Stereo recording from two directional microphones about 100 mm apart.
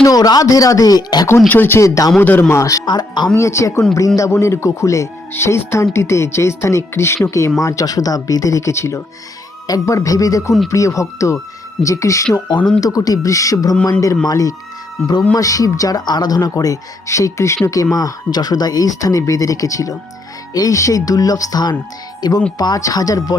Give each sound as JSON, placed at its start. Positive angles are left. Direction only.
{"t": 0.0, "sound": "speech", "side_deg": 40}
{"t": 1.5, "sound": "a man's voice", "side_deg": 20}
{"t": 2.5, "sound": "speech", "side_deg": 30}
{"t": 2.8, "sound": "speech", "side_deg": 45}
{"t": 3.3, "sound": "speech", "side_deg": 30}
{"t": 15.0, "sound": "a man's voice", "side_deg": 15}
{"t": 15.4, "sound": "speech", "side_deg": 35}
{"t": 17.9, "sound": "speech", "side_deg": 40}